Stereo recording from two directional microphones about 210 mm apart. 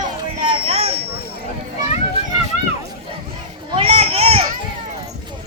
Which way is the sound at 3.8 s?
30° right (ahead or behind).